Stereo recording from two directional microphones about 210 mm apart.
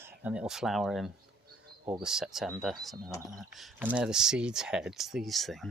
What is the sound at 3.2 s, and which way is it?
Speech, 15° right (ahead or behind).